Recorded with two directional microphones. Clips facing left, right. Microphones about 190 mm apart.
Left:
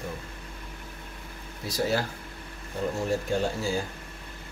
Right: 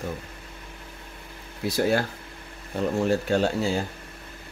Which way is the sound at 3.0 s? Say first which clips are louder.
Right 4 dB; 70° right (ahead or behind).